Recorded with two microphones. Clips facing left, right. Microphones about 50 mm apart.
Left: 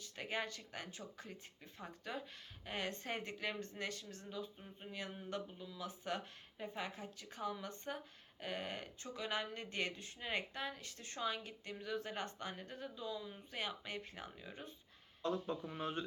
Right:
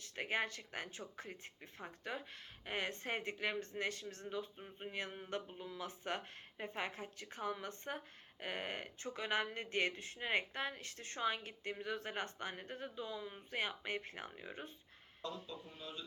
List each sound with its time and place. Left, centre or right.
0.0 s speech: right
15.2 s speech: left
15.6 s speech: left